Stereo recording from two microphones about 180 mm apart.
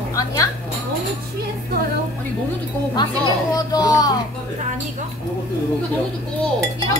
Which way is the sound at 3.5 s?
20° left (ahead or behind).